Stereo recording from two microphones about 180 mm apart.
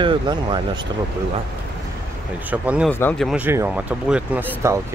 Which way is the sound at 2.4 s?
10° right (ahead or behind).